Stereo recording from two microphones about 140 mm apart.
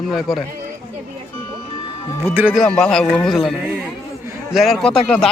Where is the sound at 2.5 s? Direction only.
Centre (ahead or behind).